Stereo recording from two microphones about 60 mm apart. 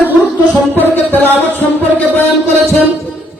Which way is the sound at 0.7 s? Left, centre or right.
Left.